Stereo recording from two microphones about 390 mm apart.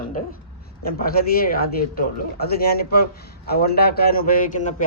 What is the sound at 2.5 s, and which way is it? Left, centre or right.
A man's voice, left.